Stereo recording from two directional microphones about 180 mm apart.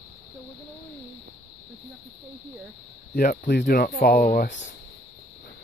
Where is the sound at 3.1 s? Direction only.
55° left (ahead or behind).